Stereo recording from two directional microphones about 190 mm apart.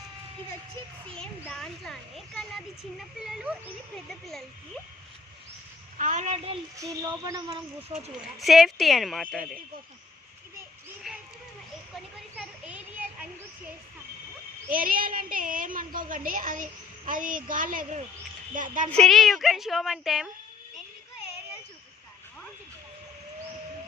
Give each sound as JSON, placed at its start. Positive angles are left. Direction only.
{"t": 1.1, "sound": "a child's voice", "side_deg": 5}
{"t": 6.0, "sound": "a woman's voice", "side_deg": -40}
{"t": 6.7, "sound": "a sound", "side_deg": -15}
{"t": 7.9, "sound": "a woman's voice", "side_deg": -35}
{"t": 8.4, "sound": "a child's voice", "side_deg": 0}
{"t": 11.1, "sound": "a sound", "side_deg": 0}
{"t": 12.4, "sound": "children playing", "side_deg": -5}
{"t": 14.7, "sound": "a woman's voice", "side_deg": -50}
{"t": 18.9, "sound": "a child's voice", "side_deg": 5}